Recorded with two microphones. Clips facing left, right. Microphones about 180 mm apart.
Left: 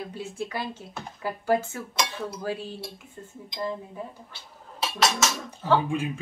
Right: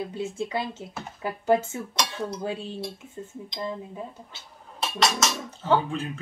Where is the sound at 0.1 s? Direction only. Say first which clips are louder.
Right 4 dB; 25° right (ahead or behind).